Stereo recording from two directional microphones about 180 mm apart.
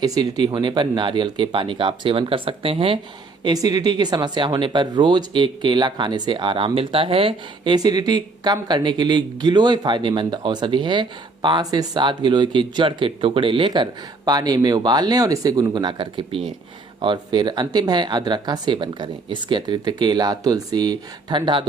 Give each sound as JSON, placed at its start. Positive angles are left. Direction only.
{"t": 0.0, "sound": "speech", "side_deg": -20}